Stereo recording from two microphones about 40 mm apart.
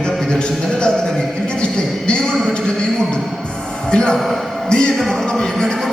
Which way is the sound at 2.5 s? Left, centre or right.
Left.